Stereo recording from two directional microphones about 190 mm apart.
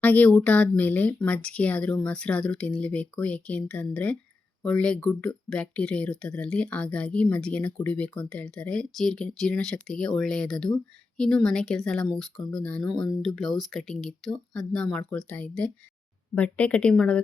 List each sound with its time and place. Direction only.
0.0 s speech: 10° left (ahead or behind)